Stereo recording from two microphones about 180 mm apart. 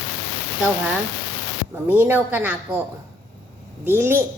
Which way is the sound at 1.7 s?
10° right (ahead or behind).